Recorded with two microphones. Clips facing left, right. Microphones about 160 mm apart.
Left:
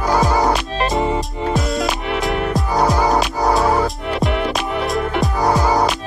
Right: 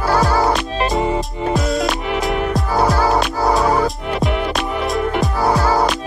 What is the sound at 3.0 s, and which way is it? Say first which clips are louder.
Music: even; 15° left (ahead or behind).